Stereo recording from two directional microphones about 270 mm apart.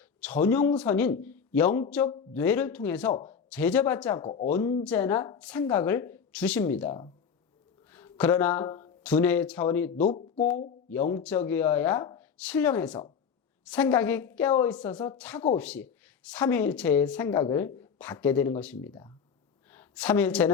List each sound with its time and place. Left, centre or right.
0.2 s speech: centre
4.3 s speech: left
4.5 s speech: centre
10.0 s speech: left
11.2 s a woman's voice: centre